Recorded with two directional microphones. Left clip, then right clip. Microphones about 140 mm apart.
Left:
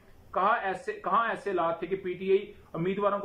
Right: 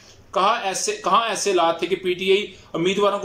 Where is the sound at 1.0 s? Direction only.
10° right (ahead or behind).